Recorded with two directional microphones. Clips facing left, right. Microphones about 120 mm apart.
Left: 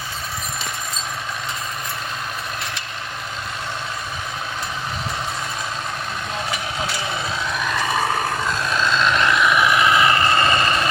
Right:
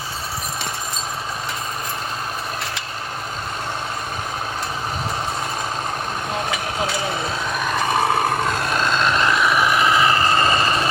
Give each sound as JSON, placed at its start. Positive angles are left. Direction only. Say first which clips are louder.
{"t": 6.8, "sound": "vehicle", "louder": "right 3 dB", "side_deg": -45}